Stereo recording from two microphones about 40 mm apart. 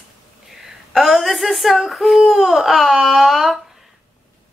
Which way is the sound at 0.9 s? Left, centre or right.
Centre.